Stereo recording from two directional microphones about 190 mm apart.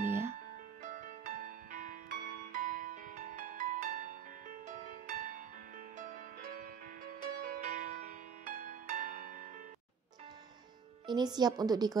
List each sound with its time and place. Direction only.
0.0 s music: 10° right (ahead or behind)
0.8 s music: 45° right (ahead or behind)
11.1 s a woman's voice: 20° right (ahead or behind)